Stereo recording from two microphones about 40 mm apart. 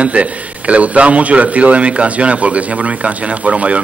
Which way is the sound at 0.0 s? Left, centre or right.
Right.